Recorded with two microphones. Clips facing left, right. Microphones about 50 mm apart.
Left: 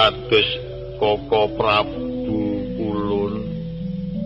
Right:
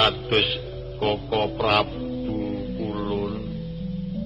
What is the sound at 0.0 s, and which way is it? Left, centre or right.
Speech, left.